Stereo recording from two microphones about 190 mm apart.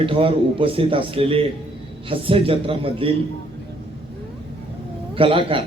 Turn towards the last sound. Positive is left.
turn(degrees=-25)  # may be behind; listen again after turning